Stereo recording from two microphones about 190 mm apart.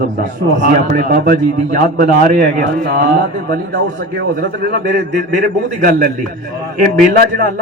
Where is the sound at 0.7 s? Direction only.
50° right (ahead or behind).